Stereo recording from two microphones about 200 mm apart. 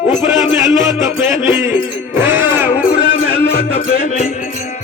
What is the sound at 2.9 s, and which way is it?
Music, 45° left (ahead or behind).